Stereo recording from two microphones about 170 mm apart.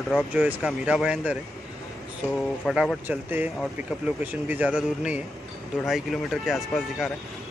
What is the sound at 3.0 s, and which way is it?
Speech, 10° right (ahead or behind).